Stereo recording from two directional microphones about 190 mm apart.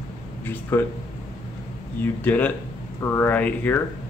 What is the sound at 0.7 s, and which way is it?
Speech, 10° left (ahead or behind).